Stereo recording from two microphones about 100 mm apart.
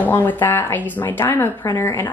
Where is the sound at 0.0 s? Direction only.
20° left (ahead or behind).